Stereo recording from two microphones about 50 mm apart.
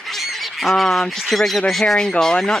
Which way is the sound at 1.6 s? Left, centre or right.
Centre.